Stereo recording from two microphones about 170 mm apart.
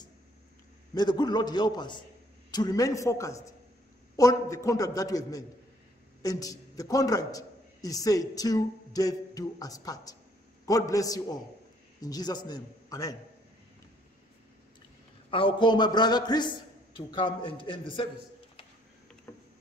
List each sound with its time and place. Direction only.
0.9 s a man's voice: 25° left (ahead or behind)
15.3 s a man's voice: 30° left (ahead or behind)
19.3 s a sound: 15° left (ahead or behind)